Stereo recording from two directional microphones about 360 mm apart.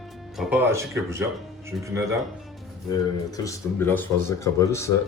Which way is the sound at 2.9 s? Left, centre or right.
Centre.